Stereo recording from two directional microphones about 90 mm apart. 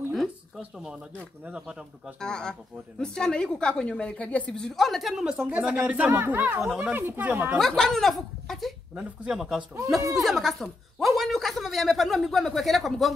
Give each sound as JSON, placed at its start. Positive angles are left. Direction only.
{"t": 0.6, "sound": "speech", "side_deg": -10}
{"t": 2.1, "sound": "a woman's voice", "side_deg": 10}
{"t": 7.5, "sound": "a man's voice", "side_deg": 5}
{"t": 8.9, "sound": "a man's voice", "side_deg": -10}